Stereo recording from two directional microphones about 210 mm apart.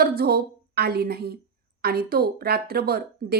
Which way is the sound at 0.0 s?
45° right (ahead or behind).